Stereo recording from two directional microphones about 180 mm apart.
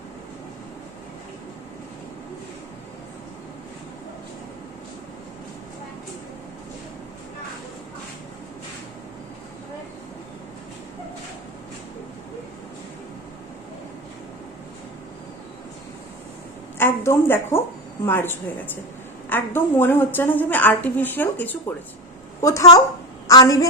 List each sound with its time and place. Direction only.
16.7 s a woman's voice: 15° left (ahead or behind)